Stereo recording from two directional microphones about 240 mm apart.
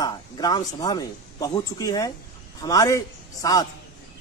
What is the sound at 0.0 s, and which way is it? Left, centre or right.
Speech, centre.